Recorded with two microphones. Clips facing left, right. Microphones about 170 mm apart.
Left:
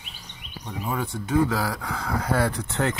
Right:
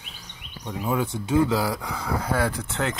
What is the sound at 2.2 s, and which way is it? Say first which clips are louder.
Speech: left 2 dB; centre (ahead or behind).